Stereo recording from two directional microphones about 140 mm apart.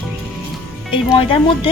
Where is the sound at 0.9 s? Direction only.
40° left (ahead or behind).